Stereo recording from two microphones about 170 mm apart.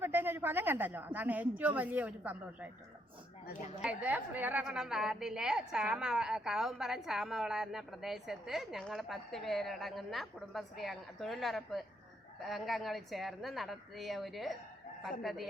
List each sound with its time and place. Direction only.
0.0 s speech: 10° right (ahead or behind)
3.8 s a woman's voice: 10° right (ahead or behind)